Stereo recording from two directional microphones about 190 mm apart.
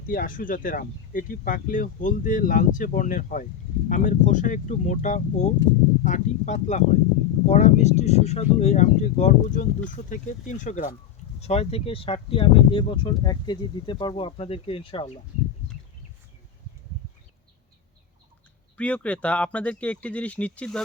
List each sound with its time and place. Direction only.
0.1 s speech: 45° left (ahead or behind); by 15.2 s 30° left (ahead or behind)
18.8 s speech: 5° left (ahead or behind)